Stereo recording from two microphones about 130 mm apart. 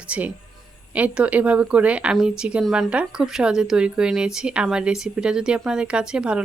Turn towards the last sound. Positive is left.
turn(degrees=-5)  # may be behind; listen again after turning